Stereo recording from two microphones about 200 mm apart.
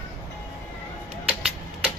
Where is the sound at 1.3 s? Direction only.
10° right (ahead or behind).